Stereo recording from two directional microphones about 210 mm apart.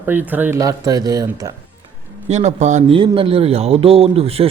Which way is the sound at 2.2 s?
30° right (ahead or behind).